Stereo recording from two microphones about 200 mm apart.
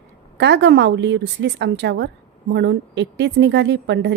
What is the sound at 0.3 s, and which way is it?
Speech, 60° right (ahead or behind).